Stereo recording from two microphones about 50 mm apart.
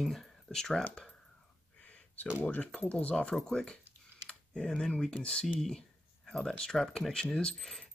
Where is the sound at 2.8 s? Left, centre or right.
Left.